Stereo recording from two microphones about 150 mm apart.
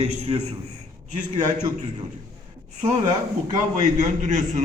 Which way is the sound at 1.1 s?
55° right (ahead or behind).